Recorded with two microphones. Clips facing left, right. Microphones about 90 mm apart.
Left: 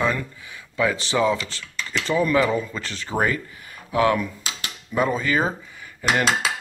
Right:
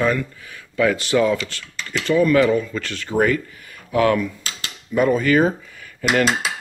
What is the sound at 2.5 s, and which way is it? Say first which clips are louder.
Speech: right 5 dB; 5° left (ahead or behind).